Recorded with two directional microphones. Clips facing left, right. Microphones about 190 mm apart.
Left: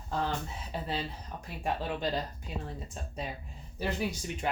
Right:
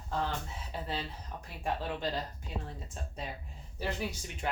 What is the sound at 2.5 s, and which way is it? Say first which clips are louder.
Speech: even; 15° left (ahead or behind).